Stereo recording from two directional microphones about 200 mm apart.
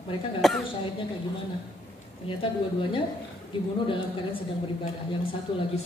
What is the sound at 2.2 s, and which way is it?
A woman's voice, 25° left (ahead or behind).